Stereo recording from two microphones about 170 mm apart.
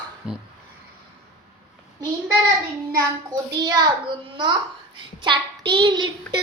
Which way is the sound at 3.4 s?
20° right (ahead or behind).